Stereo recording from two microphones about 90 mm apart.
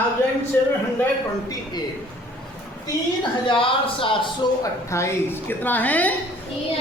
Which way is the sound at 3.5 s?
80° left.